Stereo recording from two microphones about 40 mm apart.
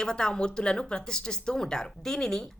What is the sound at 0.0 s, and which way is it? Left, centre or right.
Speech, centre.